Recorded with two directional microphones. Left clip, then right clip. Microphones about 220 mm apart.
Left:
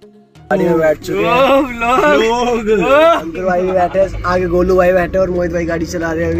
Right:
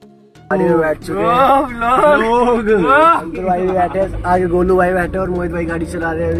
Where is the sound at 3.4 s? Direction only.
10° left (ahead or behind).